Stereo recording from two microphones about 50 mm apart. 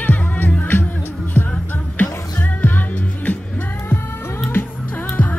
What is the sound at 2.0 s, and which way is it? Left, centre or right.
Music, left.